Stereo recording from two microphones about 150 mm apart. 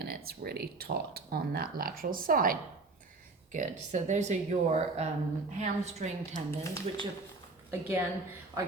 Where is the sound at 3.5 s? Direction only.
55° right (ahead or behind).